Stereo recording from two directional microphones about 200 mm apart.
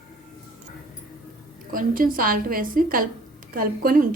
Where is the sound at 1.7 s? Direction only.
45° right (ahead or behind).